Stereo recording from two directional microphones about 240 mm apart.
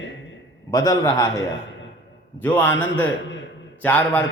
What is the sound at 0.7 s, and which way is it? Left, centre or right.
Mantra, centre.